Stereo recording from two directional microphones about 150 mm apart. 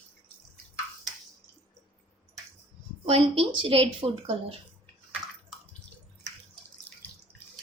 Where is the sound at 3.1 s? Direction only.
40° right (ahead or behind).